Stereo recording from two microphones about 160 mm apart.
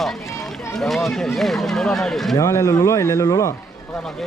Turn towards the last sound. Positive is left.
turn(degrees=20)  # may be behind; listen again after turning